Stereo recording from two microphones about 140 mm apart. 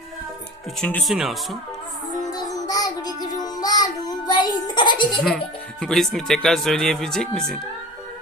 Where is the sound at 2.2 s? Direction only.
25° left (ahead or behind).